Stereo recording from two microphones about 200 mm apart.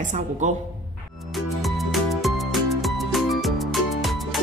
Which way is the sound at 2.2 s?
Centre (ahead or behind).